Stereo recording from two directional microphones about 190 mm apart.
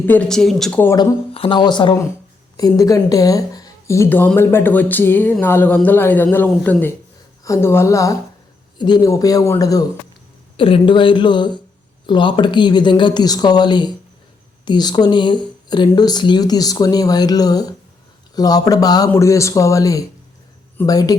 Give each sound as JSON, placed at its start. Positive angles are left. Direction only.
{"t": 0.0, "sound": "speech", "side_deg": 10}
{"t": 1.3, "sound": "speech", "side_deg": 30}